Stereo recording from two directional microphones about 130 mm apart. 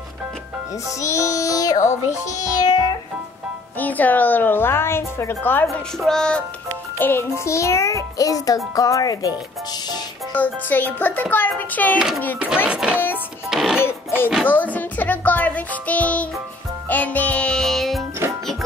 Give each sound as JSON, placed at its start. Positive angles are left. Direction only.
{"t": 1.0, "sound": "music", "side_deg": 25}
{"t": 1.9, "sound": "a child's voice", "side_deg": 65}
{"t": 2.6, "sound": "music", "side_deg": 30}
{"t": 3.7, "sound": "a woman's voice", "side_deg": 15}
{"t": 5.9, "sound": "music", "side_deg": 5}
{"t": 7.0, "sound": "a woman's voice", "side_deg": 15}
{"t": 7.3, "sound": "music", "side_deg": 20}
{"t": 10.3, "sound": "a woman's voice", "side_deg": 15}
{"t": 12.6, "sound": "speech", "side_deg": -10}
{"t": 13.8, "sound": "a sound", "side_deg": 15}
{"t": 14.4, "sound": "a child's voice", "side_deg": 15}
{"t": 16.9, "sound": "music", "side_deg": 10}